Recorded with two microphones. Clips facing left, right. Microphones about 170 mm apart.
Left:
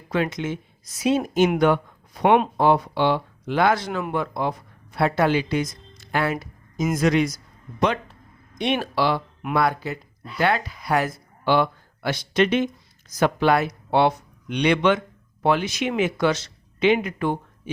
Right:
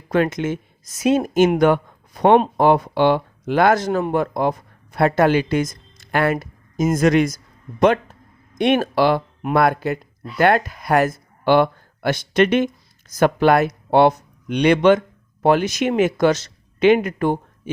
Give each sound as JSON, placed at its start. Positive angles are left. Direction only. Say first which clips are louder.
{"t": 0.1, "sound": "speech", "louder": "right 5 dB", "side_deg": -50}